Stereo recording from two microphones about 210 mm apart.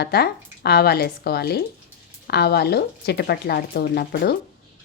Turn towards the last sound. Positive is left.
turn(degrees=50)  # may be behind; listen again after turning